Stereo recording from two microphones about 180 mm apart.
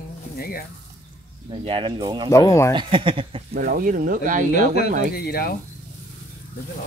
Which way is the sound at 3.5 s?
50° right (ahead or behind).